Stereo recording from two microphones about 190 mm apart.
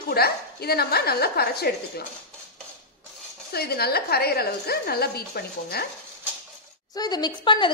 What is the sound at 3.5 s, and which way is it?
A woman's voice, 55° left (ahead or behind).